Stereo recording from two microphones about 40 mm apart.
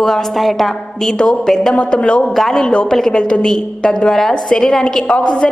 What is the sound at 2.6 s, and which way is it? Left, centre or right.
A woman's voice, left.